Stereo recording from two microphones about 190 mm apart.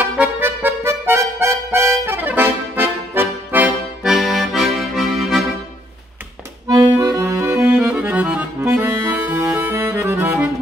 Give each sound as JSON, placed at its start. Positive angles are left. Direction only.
{"t": 0.2, "sound": "music", "side_deg": -10}
{"t": 6.7, "sound": "accordion", "side_deg": -20}